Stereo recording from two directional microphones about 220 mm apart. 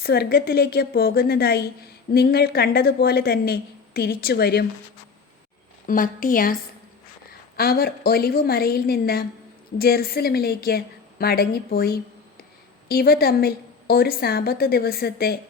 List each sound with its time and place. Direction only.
0.0 s a woman's voice: 45° left (ahead or behind)
5.8 s a woman's voice: 40° left (ahead or behind)